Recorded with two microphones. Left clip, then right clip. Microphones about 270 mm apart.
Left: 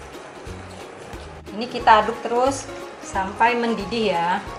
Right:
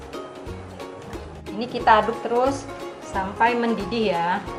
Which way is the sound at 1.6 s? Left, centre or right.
Centre.